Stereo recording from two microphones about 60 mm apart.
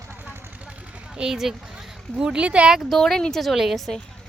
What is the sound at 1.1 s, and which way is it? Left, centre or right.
Speech, centre.